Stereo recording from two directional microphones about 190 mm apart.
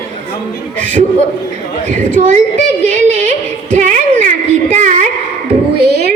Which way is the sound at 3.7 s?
40° right (ahead or behind).